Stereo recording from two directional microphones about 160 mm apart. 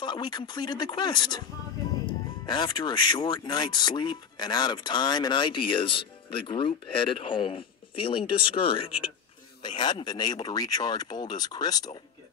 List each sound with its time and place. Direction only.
0.0 s speech: 30° left (ahead or behind)